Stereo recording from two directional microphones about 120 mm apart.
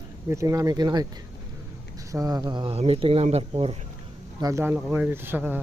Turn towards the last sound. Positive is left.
turn(degrees=-15)  # may be behind; listen again after turning